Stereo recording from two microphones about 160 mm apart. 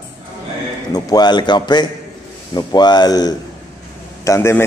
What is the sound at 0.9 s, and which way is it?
Mantra, 25° left (ahead or behind).